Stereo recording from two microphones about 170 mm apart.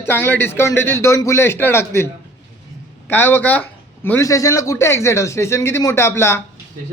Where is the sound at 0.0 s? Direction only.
10° left (ahead or behind).